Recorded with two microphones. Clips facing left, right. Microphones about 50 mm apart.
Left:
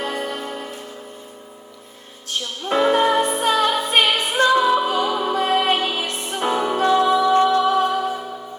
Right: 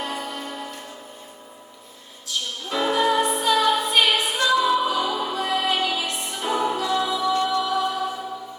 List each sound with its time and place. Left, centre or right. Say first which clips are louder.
0.0 s music: left 4 dB; left
2.2 s music: left 3 dB; left